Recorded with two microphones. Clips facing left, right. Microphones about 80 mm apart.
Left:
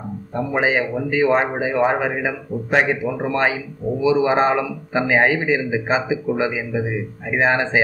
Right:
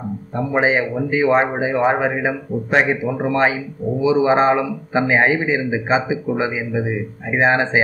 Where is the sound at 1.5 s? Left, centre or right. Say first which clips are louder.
Right 1 dB; centre.